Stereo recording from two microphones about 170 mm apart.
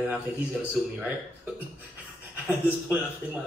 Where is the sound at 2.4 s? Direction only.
5° right (ahead or behind).